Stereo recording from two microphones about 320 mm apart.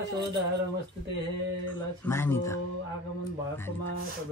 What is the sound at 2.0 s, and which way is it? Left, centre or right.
Speech, centre.